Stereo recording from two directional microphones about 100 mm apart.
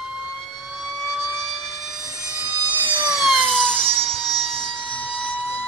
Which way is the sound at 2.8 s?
20° right (ahead or behind).